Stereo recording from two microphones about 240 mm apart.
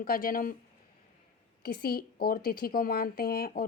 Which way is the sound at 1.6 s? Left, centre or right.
Left.